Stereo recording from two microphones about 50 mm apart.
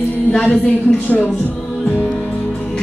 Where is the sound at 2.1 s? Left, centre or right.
Centre.